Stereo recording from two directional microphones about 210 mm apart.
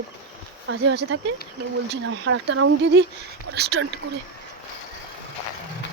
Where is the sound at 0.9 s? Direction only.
55° right (ahead or behind); by 2.7 s 85° right.